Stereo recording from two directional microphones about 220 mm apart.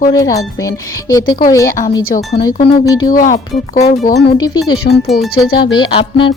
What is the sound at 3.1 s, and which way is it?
Speech, 35° left (ahead or behind).